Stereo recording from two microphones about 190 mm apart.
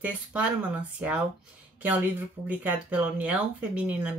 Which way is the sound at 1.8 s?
10° right (ahead or behind).